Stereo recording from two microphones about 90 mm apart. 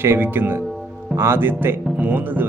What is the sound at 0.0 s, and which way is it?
Speech, 25° right (ahead or behind).